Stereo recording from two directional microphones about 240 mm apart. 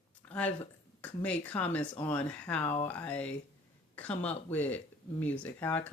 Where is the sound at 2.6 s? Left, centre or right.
Left.